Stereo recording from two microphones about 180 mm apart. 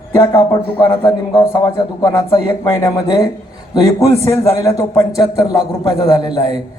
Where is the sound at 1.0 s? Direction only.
20° left (ahead or behind).